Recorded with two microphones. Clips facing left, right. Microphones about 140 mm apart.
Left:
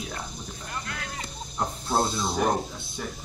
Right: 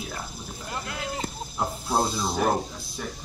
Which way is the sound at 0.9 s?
25° right (ahead or behind).